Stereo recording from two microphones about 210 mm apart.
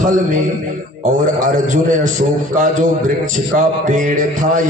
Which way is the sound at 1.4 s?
35° right (ahead or behind).